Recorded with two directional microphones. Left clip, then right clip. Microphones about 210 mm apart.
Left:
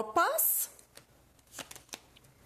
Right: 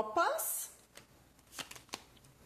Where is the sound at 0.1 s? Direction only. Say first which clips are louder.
Left 7 dB; 55° left (ahead or behind).